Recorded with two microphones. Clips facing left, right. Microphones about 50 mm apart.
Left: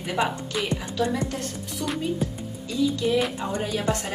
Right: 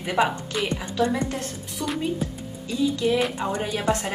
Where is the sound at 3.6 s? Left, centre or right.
Right.